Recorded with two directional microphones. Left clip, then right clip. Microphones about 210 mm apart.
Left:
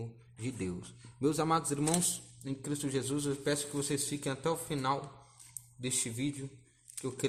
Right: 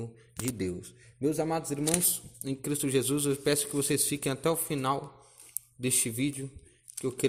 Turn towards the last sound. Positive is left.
turn(degrees=-20)  # may be behind; listen again after turning